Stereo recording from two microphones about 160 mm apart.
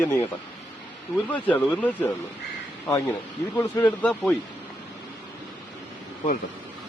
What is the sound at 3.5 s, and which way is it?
Speech, 10° left (ahead or behind).